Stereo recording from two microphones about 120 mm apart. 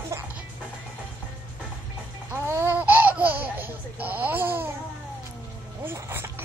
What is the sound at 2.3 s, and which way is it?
Laughter, 20° right (ahead or behind).